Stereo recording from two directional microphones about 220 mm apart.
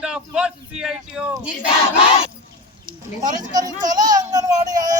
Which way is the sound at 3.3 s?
35° right (ahead or behind).